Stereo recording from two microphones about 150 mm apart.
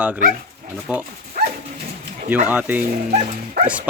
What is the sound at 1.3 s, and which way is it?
Dog, 65° right (ahead or behind).